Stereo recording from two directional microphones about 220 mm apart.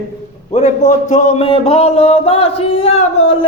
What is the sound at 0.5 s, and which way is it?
Speech, 35° left (ahead or behind).